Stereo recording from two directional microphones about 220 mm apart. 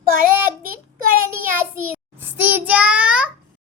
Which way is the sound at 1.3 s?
10° right (ahead or behind).